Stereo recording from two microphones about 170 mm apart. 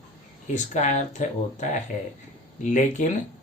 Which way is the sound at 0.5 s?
45° left (ahead or behind).